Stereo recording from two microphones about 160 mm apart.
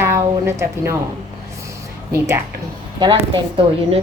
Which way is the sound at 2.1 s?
15° right (ahead or behind).